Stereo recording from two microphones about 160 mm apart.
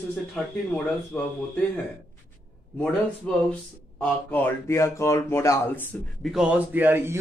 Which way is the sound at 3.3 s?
10° left (ahead or behind).